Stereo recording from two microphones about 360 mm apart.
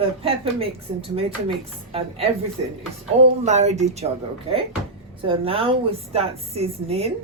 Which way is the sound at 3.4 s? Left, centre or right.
Centre.